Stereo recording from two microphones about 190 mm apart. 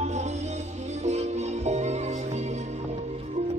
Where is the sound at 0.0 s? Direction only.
35° right (ahead or behind).